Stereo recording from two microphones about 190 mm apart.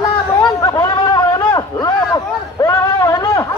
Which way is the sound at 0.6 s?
20° left (ahead or behind).